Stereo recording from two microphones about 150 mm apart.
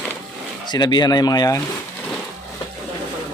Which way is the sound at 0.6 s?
30° left (ahead or behind).